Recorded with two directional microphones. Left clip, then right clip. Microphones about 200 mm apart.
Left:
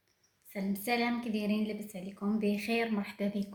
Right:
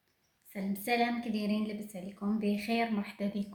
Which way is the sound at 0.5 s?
10° left (ahead or behind).